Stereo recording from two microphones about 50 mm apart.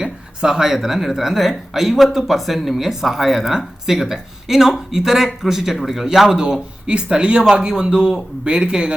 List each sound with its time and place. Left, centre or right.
0.0 s a man's voice: centre